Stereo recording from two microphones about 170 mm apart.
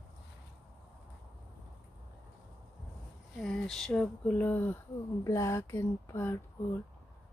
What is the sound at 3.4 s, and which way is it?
Speech, 5° left (ahead or behind).